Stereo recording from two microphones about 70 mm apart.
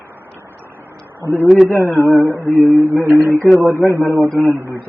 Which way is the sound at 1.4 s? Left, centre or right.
Centre.